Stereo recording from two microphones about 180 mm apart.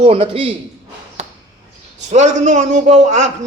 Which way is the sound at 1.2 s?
40° right (ahead or behind).